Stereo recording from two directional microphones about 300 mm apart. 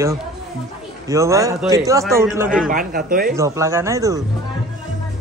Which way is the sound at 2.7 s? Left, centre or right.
Right.